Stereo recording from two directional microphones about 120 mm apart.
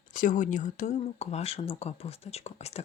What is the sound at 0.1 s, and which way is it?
Speech, 90° left.